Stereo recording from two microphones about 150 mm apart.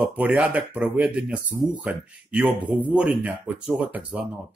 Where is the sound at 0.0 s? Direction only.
10° right (ahead or behind).